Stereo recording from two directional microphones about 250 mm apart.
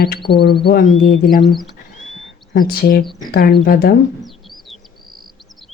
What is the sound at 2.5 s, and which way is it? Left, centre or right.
Speech, left.